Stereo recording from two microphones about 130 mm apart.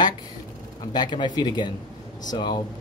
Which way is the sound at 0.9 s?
35° left (ahead or behind).